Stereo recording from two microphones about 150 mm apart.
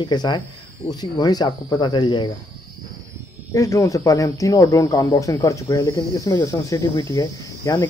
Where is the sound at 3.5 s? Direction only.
20° left (ahead or behind).